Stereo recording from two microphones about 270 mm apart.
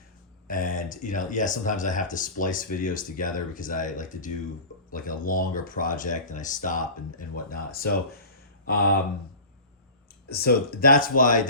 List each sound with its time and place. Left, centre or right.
0.4 s speech: left
10.2 s speech: left